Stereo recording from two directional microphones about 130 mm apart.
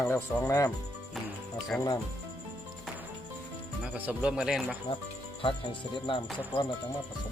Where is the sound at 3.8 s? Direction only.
10° right (ahead or behind).